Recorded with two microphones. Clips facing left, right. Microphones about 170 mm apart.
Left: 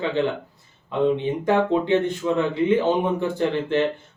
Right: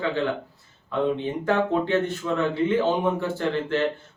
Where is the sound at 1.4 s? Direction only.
20° left (ahead or behind).